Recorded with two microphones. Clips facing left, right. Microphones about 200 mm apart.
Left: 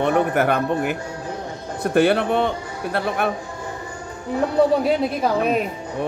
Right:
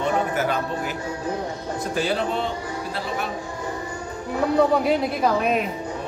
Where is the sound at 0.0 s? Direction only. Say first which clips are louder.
Left 4 dB; 60° left (ahead or behind).